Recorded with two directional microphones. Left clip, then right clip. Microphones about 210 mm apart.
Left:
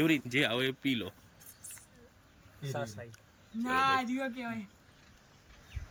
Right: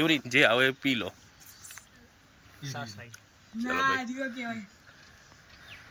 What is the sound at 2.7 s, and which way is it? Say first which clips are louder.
Speech: left 1 dB; 40° left (ahead or behind).